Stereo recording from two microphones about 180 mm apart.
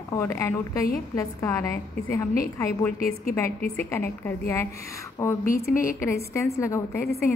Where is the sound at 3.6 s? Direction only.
10° left (ahead or behind).